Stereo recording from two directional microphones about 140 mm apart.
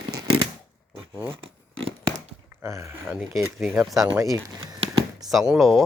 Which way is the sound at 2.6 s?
20° right (ahead or behind).